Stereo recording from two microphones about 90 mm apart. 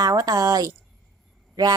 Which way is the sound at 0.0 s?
40° right (ahead or behind).